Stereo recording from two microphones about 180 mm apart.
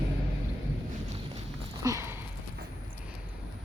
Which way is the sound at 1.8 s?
15° right (ahead or behind).